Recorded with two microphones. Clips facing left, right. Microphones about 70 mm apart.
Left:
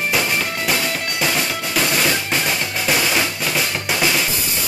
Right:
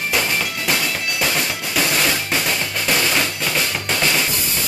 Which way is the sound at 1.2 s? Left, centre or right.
Centre.